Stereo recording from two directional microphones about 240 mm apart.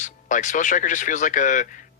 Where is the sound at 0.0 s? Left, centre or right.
Left.